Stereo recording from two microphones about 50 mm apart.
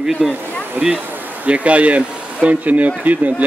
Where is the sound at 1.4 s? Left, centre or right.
Right.